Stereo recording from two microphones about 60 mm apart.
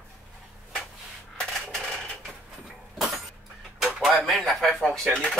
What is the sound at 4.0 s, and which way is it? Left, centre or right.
Speech, centre.